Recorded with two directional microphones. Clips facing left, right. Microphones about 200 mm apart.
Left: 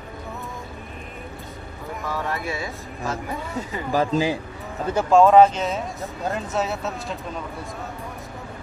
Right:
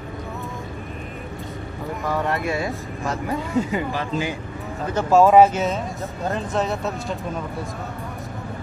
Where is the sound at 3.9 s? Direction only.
40° left (ahead or behind).